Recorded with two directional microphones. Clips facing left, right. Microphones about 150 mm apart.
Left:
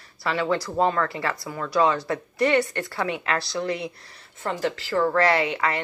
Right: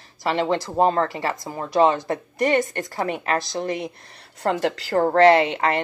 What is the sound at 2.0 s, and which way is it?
A woman's voice, 45° right (ahead or behind).